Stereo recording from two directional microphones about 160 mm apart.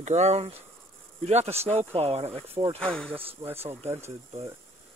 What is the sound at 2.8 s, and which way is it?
Speech, 5° left (ahead or behind).